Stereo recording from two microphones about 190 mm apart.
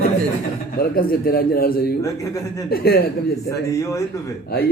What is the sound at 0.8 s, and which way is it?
A man's voice, 50° left (ahead or behind).